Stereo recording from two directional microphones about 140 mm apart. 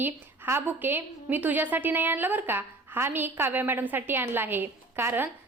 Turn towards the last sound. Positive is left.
turn(degrees=-15)  # may be behind; listen again after turning